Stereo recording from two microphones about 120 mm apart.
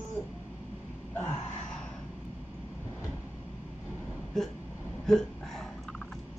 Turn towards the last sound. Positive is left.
turn(degrees=5)  # may be behind; listen again after turning